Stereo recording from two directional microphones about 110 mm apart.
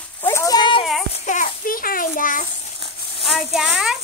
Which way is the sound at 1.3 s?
90° left.